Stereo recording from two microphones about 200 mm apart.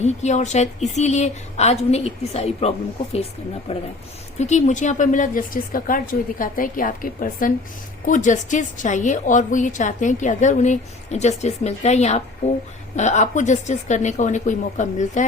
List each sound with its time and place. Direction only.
0.0 s a woman's voice: 35° left (ahead or behind)
4.4 s a woman's voice: 35° left (ahead or behind)